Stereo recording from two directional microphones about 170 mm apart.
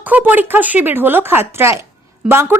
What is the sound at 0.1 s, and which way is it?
Speech, 10° right (ahead or behind).